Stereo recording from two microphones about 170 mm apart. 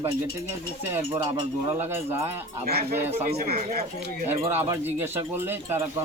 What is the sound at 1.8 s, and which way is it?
Speech, 15° right (ahead or behind).